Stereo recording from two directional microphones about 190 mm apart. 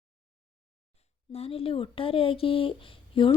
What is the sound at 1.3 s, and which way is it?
Speech, 30° left (ahead or behind).